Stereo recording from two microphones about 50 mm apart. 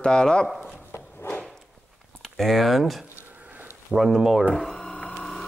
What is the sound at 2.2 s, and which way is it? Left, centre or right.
Speech, centre.